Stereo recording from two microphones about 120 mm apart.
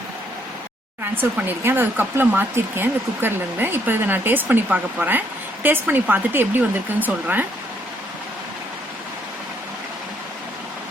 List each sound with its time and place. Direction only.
1.1 s speech: 15° right (ahead or behind)